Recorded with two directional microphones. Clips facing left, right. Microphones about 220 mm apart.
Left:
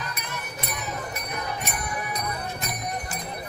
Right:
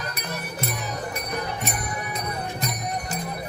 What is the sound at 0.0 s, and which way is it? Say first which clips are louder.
Music: right 3 dB; 40° right (ahead or behind).